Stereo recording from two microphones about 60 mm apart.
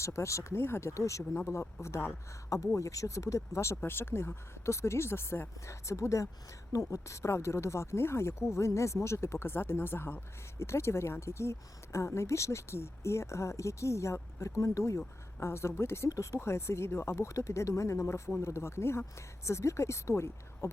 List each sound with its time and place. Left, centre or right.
0.0 s speech: left
3.8 s speech: left
10.6 s speech: left
16.0 s speech: left
16.4 s speech: left